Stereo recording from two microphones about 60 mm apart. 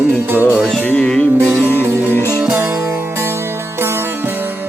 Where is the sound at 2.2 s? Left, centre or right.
Left.